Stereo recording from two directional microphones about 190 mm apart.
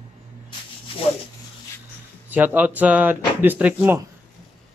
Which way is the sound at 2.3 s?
10° right (ahead or behind).